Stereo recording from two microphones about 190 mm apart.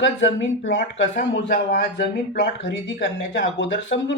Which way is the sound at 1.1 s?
50° left (ahead or behind).